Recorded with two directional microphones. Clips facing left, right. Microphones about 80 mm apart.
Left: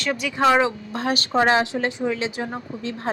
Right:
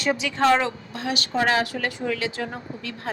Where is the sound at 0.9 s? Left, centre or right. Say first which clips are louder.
Left 4 dB; left.